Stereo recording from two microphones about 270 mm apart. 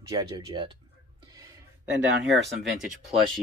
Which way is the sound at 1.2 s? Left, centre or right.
Centre.